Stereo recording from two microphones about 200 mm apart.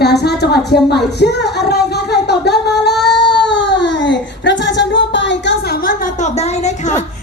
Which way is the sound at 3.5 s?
60° left (ahead or behind).